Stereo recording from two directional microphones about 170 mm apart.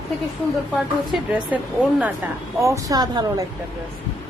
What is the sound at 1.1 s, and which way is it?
A woman's voice, 5° right (ahead or behind).